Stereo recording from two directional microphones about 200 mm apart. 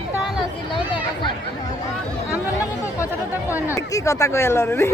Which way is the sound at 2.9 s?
15° left (ahead or behind).